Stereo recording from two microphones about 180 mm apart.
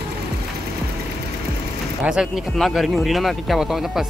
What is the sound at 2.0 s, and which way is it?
Speech, centre (ahead or behind).